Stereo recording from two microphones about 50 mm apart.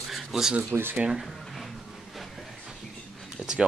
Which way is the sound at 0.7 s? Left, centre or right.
Right.